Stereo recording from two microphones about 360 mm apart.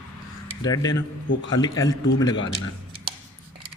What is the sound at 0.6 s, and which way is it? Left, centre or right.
Speech, centre.